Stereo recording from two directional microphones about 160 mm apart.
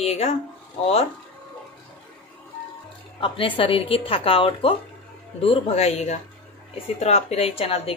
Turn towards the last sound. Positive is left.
turn(degrees=40)  # may be behind; listen again after turning